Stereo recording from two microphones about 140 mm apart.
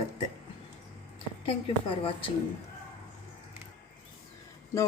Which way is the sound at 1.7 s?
40° left (ahead or behind).